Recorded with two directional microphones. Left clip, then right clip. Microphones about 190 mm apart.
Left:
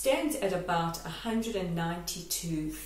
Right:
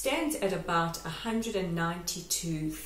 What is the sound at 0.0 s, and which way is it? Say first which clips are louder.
Speech: left 2 dB; 15° right (ahead or behind).